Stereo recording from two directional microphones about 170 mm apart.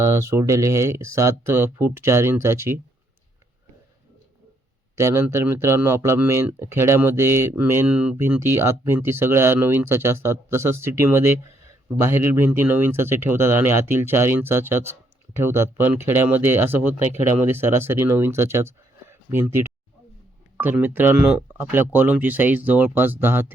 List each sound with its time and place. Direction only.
0.0 s speech: 15° right (ahead or behind)
4.9 s speech: 15° right (ahead or behind)
20.6 s speech: 10° right (ahead or behind)